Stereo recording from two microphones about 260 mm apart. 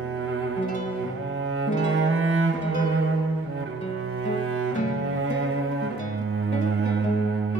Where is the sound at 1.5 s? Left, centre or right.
Right.